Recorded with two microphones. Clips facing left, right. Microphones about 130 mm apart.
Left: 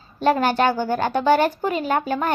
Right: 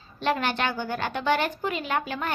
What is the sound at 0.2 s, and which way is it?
A woman's voice, 40° left (ahead or behind).